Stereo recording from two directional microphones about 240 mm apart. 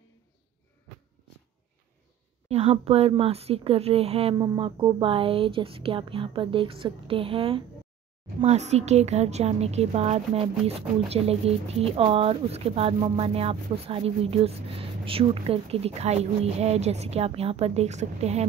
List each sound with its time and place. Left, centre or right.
2.4 s speech: right